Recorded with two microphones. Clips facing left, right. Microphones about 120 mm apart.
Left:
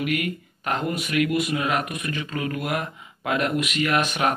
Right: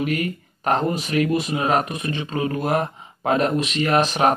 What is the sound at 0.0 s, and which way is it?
Speech, 35° right (ahead or behind).